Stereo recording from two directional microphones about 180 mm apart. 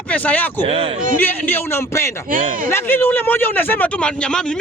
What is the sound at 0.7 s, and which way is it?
Speech, 30° right (ahead or behind).